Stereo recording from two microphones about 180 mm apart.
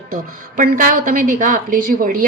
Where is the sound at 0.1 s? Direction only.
50° right (ahead or behind).